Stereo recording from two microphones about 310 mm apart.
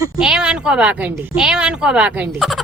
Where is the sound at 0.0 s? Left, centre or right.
Centre.